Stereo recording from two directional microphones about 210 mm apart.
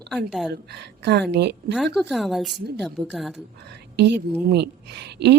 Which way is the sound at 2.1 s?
Centre (ahead or behind).